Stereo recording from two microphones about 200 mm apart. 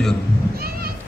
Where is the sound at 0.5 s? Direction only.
50° right (ahead or behind).